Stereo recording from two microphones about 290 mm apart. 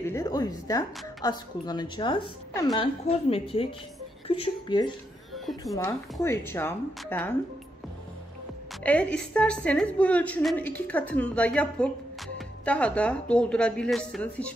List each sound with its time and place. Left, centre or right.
0.0 s a woman's voice: centre
5.3 s music: centre
5.7 s a woman's voice: centre
8.8 s a woman's voice: centre